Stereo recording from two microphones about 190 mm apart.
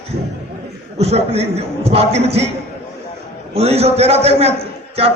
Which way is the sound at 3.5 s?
35° right (ahead or behind).